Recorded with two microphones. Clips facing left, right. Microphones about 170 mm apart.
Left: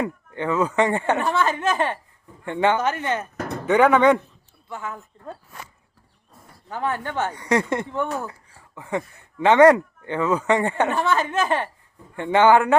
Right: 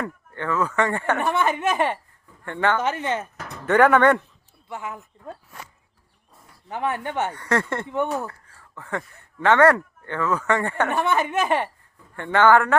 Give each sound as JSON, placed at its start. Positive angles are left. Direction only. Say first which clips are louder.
{"t": 0.0, "sound": "speech", "louder": "left 4 dB", "side_deg": 15}
{"t": 1.2, "sound": "a woman's voice", "louder": "even", "side_deg": -20}
{"t": 2.4, "sound": "speech", "louder": "left 2 dB", "side_deg": 15}
{"t": 2.8, "sound": "a woman's voice", "louder": "left 1 dB", "side_deg": -25}
{"t": 3.3, "sound": "music", "louder": "left 9 dB", "side_deg": 55}
{"t": 3.7, "sound": "speech", "louder": "even", "side_deg": 0}
{"t": 4.7, "sound": "speech", "louder": "even", "side_deg": -15}
{"t": 6.7, "sound": "a woman's voice", "louder": "even", "side_deg": -20}
{"t": 7.3, "sound": "a man's voice", "louder": "left 2 dB", "side_deg": 15}
{"t": 10.9, "sound": "a woman's voice", "louder": "even", "side_deg": -20}
{"t": 12.1, "sound": "a man's voice", "louder": "left 1 dB", "side_deg": 15}